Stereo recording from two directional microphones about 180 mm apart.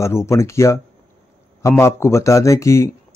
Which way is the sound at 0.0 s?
15° left (ahead or behind).